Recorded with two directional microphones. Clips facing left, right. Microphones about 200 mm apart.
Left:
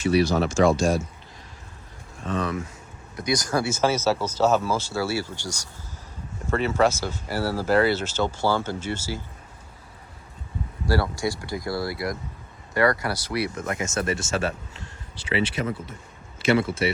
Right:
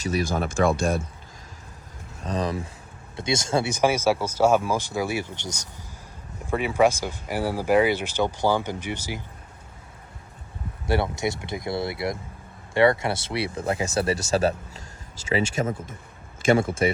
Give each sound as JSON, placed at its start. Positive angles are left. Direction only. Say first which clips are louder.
{"t": 0.0, "sound": "speech", "louder": "left 5 dB", "side_deg": -45}
{"t": 2.2, "sound": "speech", "louder": "even", "side_deg": -35}
{"t": 10.8, "sound": "speech", "louder": "even", "side_deg": -20}